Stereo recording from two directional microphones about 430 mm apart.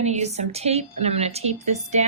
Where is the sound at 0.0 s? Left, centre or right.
Centre.